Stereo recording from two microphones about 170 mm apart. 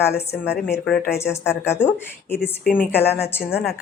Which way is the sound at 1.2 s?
15° left (ahead or behind).